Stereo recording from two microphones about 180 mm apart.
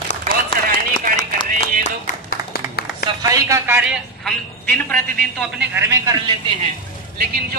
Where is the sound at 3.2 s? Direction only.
15° right (ahead or behind).